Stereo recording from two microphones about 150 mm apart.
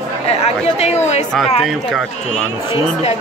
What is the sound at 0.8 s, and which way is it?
Speech, 45° left (ahead or behind).